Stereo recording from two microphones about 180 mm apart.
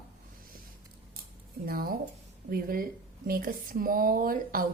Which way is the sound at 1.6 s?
55° right (ahead or behind).